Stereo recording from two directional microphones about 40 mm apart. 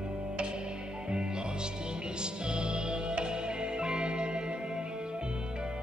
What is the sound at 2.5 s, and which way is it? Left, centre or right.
Music, right.